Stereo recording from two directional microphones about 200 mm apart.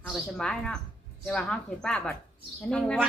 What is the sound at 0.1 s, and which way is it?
Speech, 5° left (ahead or behind).